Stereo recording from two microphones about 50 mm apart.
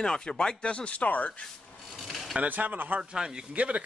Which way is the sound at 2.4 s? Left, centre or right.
Right.